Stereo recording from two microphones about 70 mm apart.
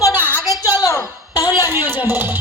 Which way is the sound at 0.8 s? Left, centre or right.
Left.